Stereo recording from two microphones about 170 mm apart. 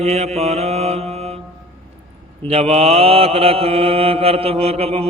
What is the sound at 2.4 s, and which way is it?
Mantra, 35° right (ahead or behind).